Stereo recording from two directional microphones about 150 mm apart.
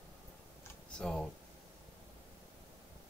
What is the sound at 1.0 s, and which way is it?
Speech, 5° left (ahead or behind).